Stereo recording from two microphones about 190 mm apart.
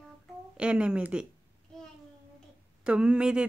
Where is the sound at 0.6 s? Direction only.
5° right (ahead or behind).